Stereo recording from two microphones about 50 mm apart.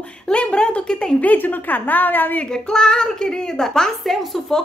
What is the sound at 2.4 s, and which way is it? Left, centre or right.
A woman's voice, centre.